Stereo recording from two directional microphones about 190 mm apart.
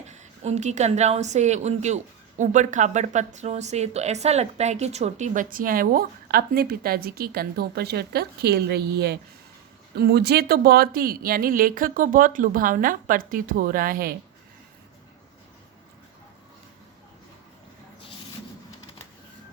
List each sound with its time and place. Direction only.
0.1 s a woman's voice: 35° right (ahead or behind)